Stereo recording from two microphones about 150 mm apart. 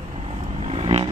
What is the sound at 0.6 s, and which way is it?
Vehicle, 40° right (ahead or behind).